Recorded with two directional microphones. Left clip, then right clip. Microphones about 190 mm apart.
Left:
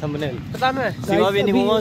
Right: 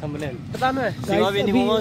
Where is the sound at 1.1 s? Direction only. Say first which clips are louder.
Left 3 dB; 50° left (ahead or behind).